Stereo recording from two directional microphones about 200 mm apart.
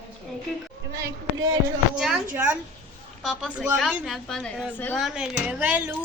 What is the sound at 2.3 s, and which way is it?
Speech, 5° right (ahead or behind).